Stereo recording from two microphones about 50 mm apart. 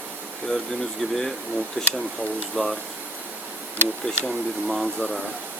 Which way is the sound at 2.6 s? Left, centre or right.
Centre.